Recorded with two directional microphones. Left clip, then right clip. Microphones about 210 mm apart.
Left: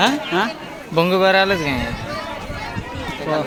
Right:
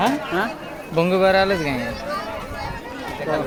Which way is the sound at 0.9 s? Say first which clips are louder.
Left 2 dB; 10° left (ahead or behind).